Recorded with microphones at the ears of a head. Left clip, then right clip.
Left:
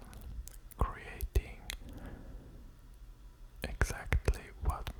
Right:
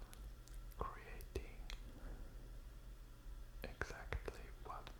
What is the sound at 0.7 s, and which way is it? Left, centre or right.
Whispering, left.